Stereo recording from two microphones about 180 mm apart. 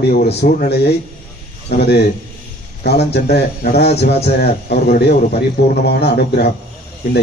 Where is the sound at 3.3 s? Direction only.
35° left (ahead or behind).